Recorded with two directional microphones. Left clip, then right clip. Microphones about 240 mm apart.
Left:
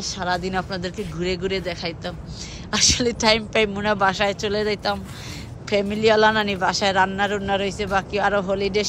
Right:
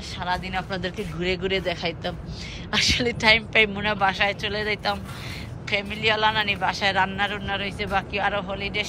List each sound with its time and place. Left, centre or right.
0.0 s a woman's voice: centre
0.7 s a woman's voice: centre